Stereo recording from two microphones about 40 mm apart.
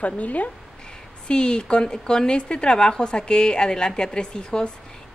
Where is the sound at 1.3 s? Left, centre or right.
Left.